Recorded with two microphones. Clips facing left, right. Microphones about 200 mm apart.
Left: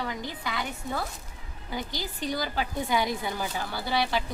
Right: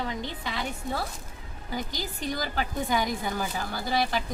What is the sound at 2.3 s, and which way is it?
A woman's voice, 45° right (ahead or behind).